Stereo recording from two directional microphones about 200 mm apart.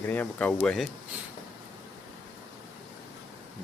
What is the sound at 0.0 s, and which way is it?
Speech, 10° left (ahead or behind).